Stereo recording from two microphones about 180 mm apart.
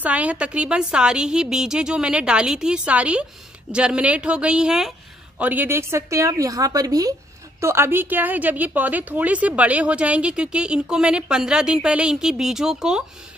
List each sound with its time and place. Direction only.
0.0 s a woman's voice: 10° right (ahead or behind)